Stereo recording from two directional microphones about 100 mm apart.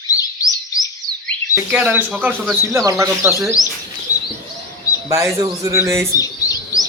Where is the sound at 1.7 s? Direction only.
15° right (ahead or behind).